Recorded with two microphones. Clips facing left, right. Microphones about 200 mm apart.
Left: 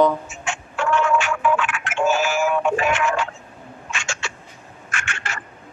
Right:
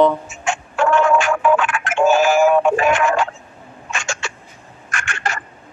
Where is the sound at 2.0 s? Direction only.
50° right (ahead or behind).